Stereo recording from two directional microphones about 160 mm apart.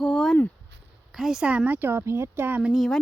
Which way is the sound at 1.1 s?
5° right (ahead or behind).